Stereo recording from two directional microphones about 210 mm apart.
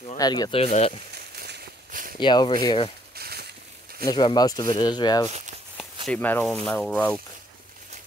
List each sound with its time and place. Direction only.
0.2 s speech: 20° left (ahead or behind)
1.1 s a sound: 50° right (ahead or behind)
2.1 s speech: 20° left (ahead or behind)
3.2 s a sound: 50° right (ahead or behind)
4.0 s speech: 20° left (ahead or behind)
6.0 s speech: 10° left (ahead or behind)